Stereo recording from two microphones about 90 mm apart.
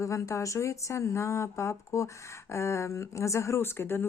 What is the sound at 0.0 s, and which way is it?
A woman's voice, 35° left (ahead or behind).